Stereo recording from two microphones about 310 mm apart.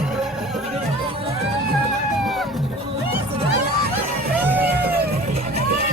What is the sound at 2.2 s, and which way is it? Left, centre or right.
Music, centre.